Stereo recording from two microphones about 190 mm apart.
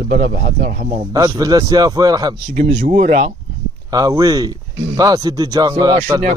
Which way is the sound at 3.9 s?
20° right (ahead or behind).